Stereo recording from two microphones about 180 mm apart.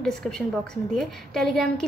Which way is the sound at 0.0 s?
5° left (ahead or behind).